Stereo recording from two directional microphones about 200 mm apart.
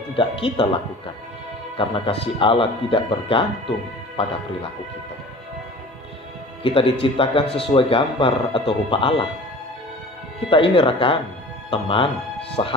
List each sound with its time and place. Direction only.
0.2 s speech: 25° left (ahead or behind)
1.8 s speech: 25° left (ahead or behind)
6.6 s speech: 25° left (ahead or behind)
10.5 s speech: 25° left (ahead or behind)